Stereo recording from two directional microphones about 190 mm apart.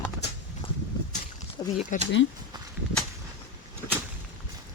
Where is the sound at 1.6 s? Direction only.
25° left (ahead or behind).